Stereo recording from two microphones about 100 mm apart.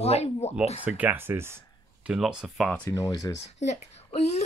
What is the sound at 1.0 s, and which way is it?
Speech, 20° right (ahead or behind).